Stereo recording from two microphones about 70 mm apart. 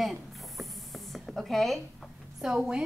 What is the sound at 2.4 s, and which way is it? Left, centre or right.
Speech, centre.